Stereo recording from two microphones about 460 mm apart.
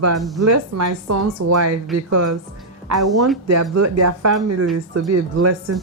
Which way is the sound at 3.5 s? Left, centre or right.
Right.